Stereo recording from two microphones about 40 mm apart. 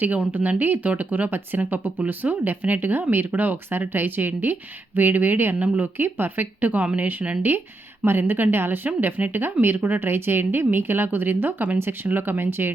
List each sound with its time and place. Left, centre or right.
0.0 s speech: right
3.7 s speech: right
5.5 s speech: right
6.0 s speech: right
6.7 s speech: right
8.0 s a woman's voice: right
9.0 s a woman's voice: right